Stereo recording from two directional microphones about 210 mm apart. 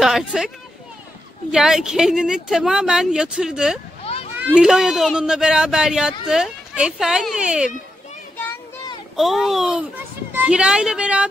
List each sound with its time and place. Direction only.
0.0 s speech: centre (ahead or behind)
1.5 s speech: 5° right (ahead or behind)
4.0 s a sound: 30° left (ahead or behind)
4.4 s speech: 5° right (ahead or behind)
9.1 s speech: centre (ahead or behind)